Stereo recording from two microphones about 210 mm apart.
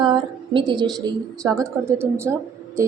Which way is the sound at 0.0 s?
20° right (ahead or behind).